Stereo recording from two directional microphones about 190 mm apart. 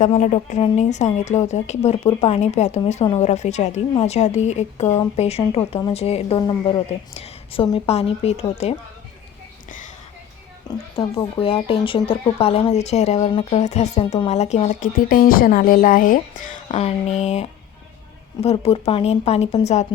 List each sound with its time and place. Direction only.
0.0 s a woman's voice: 40° left (ahead or behind)
9.6 s a sound: 45° left (ahead or behind)
10.9 s a woman's voice: 30° left (ahead or behind)